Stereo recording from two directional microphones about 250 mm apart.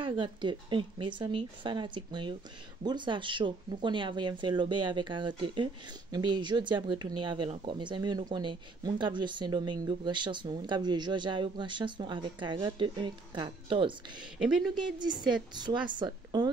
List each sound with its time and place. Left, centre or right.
0.0 s speech: centre
14.4 s speech: centre
14.8 s a woman's voice: centre